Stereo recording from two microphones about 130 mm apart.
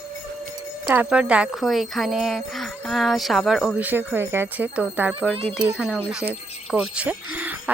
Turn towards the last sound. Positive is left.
turn(degrees=-10)  # may be behind; listen again after turning